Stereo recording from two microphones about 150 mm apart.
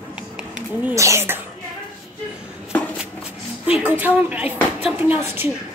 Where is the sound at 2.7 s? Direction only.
10° left (ahead or behind).